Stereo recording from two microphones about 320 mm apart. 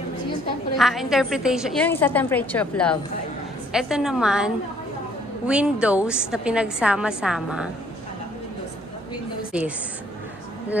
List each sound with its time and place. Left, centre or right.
0.7 s a woman's voice: centre
5.5 s a woman's voice: centre
9.5 s a woman's voice: centre